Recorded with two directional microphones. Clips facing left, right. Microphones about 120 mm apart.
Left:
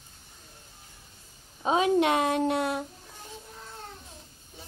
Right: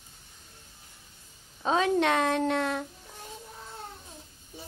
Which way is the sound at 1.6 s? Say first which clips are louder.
Left 2 dB; 15° left (ahead or behind).